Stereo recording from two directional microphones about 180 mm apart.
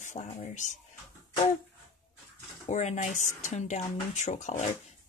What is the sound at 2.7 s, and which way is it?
Speech, 40° left (ahead or behind).